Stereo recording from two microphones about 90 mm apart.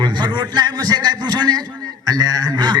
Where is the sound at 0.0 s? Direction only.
55° right (ahead or behind).